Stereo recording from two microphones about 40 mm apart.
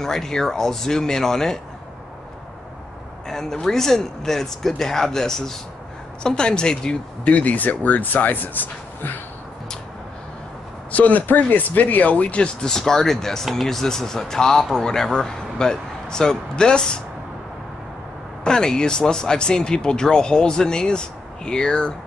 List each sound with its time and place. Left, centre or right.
0.0 s speech: centre
3.3 s speech: centre
7.2 s speech: left
10.9 s speech: left
12.6 s speech: centre
18.4 s speech: centre